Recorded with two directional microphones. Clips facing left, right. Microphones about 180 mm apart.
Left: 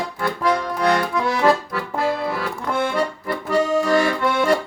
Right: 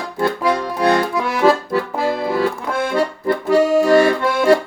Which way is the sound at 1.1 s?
5° right (ahead or behind).